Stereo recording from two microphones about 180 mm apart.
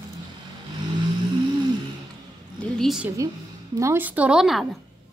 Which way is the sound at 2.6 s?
Centre (ahead or behind).